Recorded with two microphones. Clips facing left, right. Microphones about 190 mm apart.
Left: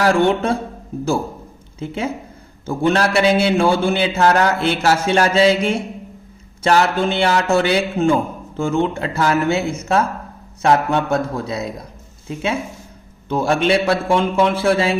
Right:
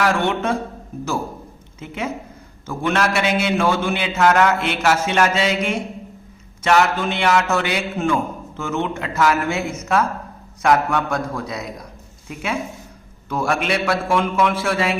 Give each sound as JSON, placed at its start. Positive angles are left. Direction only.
{"t": 0.0, "sound": "a man's voice", "side_deg": 35}
{"t": 1.8, "sound": "a man's voice", "side_deg": 30}